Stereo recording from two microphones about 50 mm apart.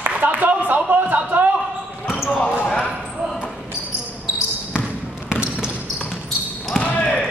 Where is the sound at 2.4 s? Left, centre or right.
Left.